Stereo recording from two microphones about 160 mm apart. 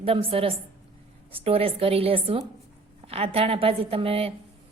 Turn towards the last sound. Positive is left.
turn(degrees=-35)  # may be behind; listen again after turning